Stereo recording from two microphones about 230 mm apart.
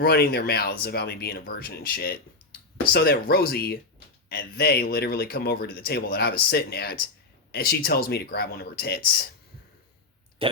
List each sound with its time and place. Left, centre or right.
0.0 s speech: left
10.4 s speech: right